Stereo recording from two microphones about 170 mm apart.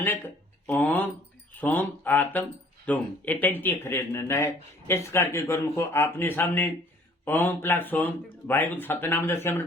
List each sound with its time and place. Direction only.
0.7 s speech: 10° left (ahead or behind)